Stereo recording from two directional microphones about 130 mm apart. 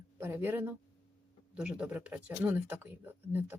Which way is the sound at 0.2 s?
15° right (ahead or behind).